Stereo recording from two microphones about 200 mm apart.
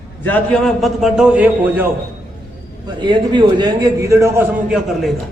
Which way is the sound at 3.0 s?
25° right (ahead or behind).